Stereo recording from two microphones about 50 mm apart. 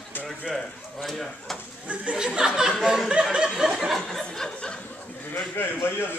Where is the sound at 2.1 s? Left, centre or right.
Centre.